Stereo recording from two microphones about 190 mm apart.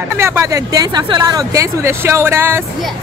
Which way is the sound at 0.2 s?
15° right (ahead or behind).